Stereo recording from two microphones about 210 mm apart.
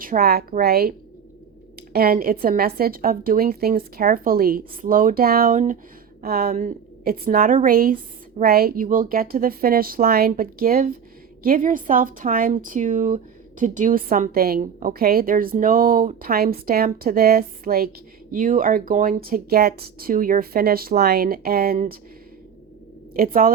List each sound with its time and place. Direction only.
0.0 s a woman's voice: 45° right (ahead or behind)
23.1 s a woman's voice: 45° right (ahead or behind)